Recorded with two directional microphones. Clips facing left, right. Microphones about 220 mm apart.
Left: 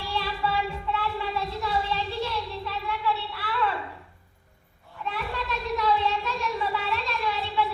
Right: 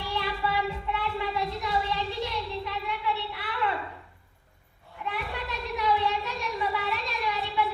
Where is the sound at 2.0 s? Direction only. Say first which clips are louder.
Left 1 dB; 20° right (ahead or behind).